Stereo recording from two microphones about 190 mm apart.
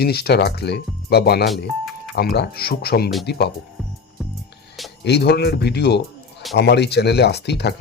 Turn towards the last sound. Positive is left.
turn(degrees=60)  # may be behind; listen again after turning